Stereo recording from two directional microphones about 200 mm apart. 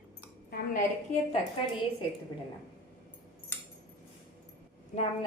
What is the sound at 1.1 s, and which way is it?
Speech, 40° left (ahead or behind).